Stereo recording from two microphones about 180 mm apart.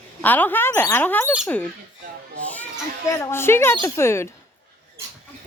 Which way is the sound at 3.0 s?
15° left (ahead or behind).